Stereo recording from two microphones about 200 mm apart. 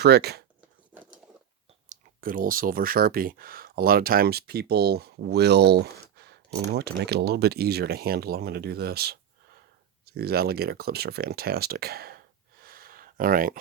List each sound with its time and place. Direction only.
0.0 s speech: 50° right (ahead or behind)
0.9 s a sound: 5° right (ahead or behind)
1.9 s speech: 45° right (ahead or behind)